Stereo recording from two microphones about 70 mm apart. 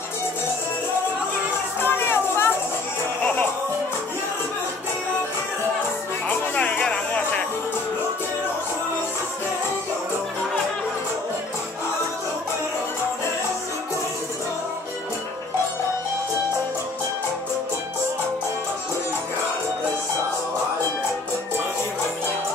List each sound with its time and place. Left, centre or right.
1.8 s music: left
6.2 s music: centre